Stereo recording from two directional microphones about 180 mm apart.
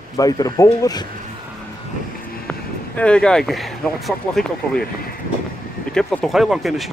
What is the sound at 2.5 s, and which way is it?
Speech, 5° left (ahead or behind).